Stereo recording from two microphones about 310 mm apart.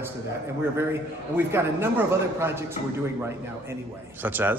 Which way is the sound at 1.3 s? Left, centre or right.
Centre.